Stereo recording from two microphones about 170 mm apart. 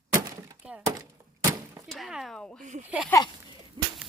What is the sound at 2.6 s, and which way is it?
Speech, 45° right (ahead or behind).